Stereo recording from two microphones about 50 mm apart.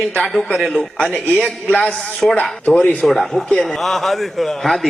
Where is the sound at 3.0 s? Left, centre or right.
Centre.